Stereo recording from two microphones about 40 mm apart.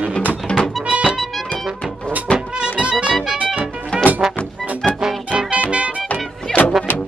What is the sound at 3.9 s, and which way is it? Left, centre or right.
Music, left.